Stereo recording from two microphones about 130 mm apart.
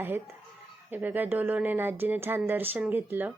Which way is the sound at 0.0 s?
15° right (ahead or behind).